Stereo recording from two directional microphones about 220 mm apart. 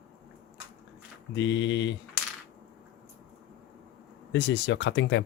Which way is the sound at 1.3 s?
55° left (ahead or behind).